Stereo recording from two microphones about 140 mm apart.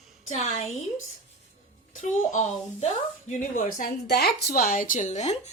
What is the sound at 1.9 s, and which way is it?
Speech, 60° left (ahead or behind).